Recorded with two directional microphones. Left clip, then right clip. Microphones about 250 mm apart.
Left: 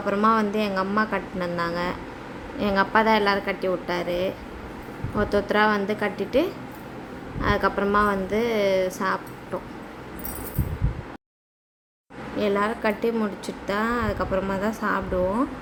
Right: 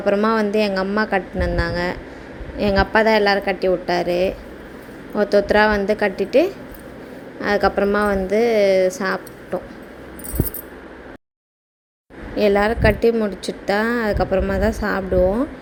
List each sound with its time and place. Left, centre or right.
0.0 s a woman's voice: centre
12.4 s a woman's voice: centre